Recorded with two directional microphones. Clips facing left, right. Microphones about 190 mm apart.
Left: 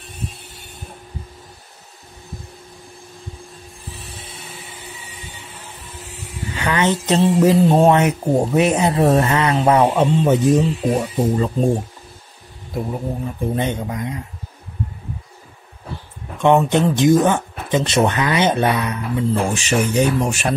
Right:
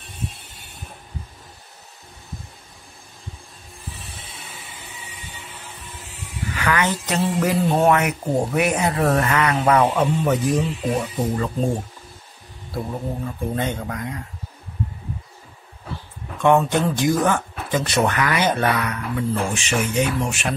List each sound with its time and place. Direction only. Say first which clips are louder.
6.5 s speech: left 3 dB; 25° left (ahead or behind)
13.6 s speech: left 3 dB; 20° left (ahead or behind)
16.3 s speech: left 3 dB; 20° left (ahead or behind)
19.5 s speech: left 4 dB; 35° left (ahead or behind)